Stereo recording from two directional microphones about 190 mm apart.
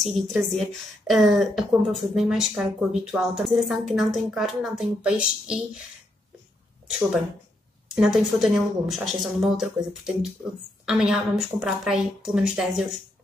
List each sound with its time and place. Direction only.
0.0 s a woman's voice: centre (ahead or behind)
6.9 s a woman's voice: 5° right (ahead or behind)